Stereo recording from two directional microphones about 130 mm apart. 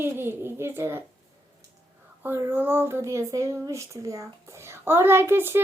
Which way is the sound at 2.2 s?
15° right (ahead or behind).